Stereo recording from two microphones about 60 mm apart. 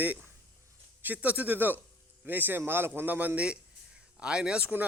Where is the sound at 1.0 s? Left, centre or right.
Right.